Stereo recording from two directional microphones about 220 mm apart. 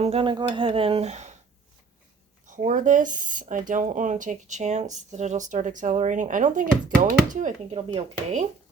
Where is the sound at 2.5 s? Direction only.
35° right (ahead or behind).